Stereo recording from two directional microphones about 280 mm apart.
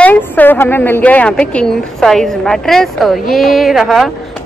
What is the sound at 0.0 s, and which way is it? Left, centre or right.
A woman's voice, centre.